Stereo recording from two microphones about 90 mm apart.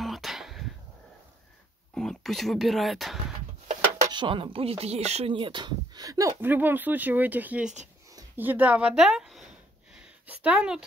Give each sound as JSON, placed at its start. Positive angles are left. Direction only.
{"t": 0.0, "sound": "a sound", "side_deg": 0}
{"t": 2.0, "sound": "speech", "side_deg": 5}
{"t": 4.1, "sound": "speech", "side_deg": -70}
{"t": 6.0, "sound": "speech", "side_deg": -40}
{"t": 6.4, "sound": "speech", "side_deg": -20}
{"t": 9.9, "sound": "a sound", "side_deg": -15}